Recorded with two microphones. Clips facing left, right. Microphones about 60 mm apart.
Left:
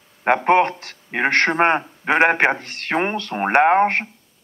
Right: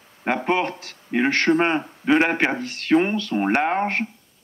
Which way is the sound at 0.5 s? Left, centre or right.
Left.